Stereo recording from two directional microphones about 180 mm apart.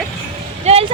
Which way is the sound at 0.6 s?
35° right (ahead or behind).